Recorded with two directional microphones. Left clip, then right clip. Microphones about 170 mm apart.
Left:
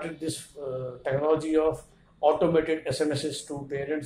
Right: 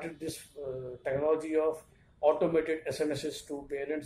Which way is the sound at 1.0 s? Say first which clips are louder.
Left 4 dB; 20° right (ahead or behind).